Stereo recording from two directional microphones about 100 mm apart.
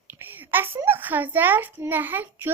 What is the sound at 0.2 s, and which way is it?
A child's voice, 20° right (ahead or behind).